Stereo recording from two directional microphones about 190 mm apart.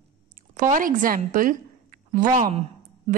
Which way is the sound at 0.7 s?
45° right (ahead or behind).